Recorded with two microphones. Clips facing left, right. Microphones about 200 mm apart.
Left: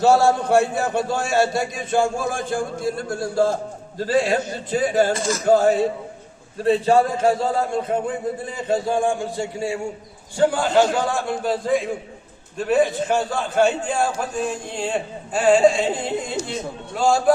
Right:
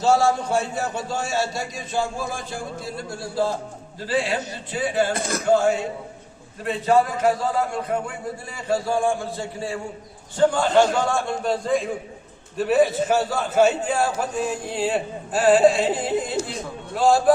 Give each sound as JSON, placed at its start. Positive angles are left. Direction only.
{"t": 0.0, "sound": "a man's voice", "side_deg": 60}
{"t": 5.1, "sound": "speech", "side_deg": -60}
{"t": 5.5, "sound": "a man's voice", "side_deg": 40}